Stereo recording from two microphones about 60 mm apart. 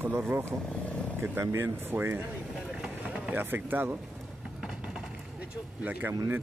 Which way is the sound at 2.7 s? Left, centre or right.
Centre.